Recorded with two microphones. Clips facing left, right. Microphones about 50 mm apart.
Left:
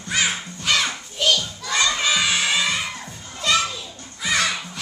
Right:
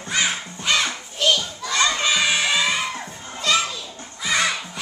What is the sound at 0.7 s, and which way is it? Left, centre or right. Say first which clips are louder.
Music: even; centre.